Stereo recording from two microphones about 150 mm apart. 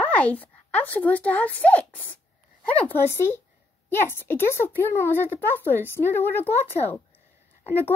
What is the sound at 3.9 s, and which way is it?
A woman's voice, 15° left (ahead or behind).